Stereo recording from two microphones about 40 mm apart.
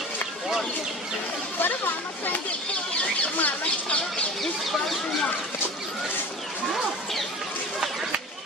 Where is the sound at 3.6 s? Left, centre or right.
Left.